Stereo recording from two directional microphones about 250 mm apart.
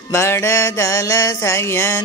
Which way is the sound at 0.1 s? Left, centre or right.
Centre.